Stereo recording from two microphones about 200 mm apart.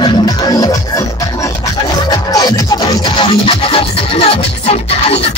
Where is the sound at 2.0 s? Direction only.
15° left (ahead or behind).